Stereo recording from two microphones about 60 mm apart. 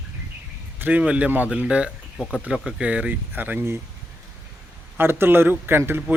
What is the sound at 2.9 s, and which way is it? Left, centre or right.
Speech, right.